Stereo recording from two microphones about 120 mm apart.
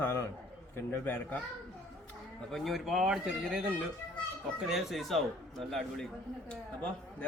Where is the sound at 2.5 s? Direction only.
Centre (ahead or behind).